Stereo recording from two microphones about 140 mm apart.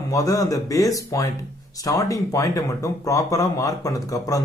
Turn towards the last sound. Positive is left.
turn(degrees=25)  # may be behind; listen again after turning